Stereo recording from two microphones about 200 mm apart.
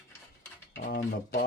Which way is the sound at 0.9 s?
50° left (ahead or behind).